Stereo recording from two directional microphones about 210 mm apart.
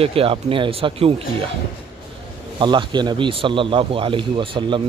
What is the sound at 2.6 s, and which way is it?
Speech, 20° right (ahead or behind).